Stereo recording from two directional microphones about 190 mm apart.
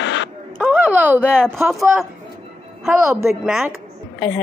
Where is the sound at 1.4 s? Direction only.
Centre (ahead or behind).